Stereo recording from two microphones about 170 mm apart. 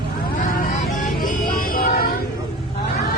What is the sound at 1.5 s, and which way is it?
Music, 55° left (ahead or behind).